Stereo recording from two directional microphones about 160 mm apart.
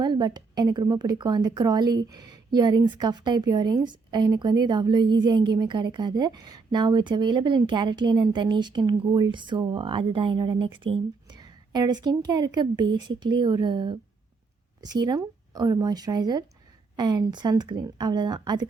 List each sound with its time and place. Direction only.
0.0 s a woman's voice: 25° right (ahead or behind)